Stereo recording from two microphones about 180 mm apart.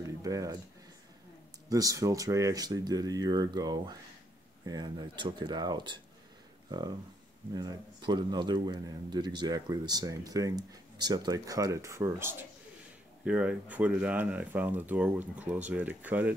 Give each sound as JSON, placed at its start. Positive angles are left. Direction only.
{"t": 0.0, "sound": "a sound", "side_deg": -20}
{"t": 1.7, "sound": "a man's voice", "side_deg": -20}
{"t": 7.5, "sound": "a man's voice", "side_deg": -25}